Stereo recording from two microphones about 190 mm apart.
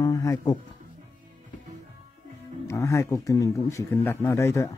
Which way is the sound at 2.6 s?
15° left (ahead or behind).